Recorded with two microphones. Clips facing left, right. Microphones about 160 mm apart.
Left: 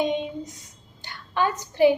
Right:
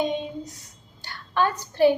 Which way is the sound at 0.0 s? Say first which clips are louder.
Left 1 dB; 15° left (ahead or behind).